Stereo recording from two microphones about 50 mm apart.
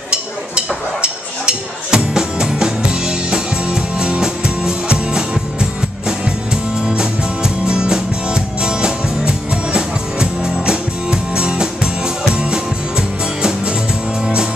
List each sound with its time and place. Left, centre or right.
1.0 s music: centre